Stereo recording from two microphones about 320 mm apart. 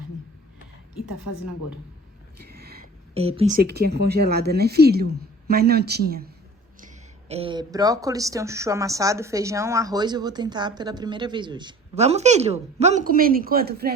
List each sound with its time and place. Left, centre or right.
0.9 s a woman's voice: left
2.4 s speech: right